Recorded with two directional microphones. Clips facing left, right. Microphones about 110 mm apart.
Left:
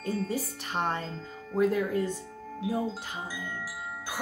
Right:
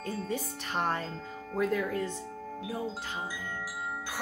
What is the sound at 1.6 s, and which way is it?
Speech, 10° left (ahead or behind).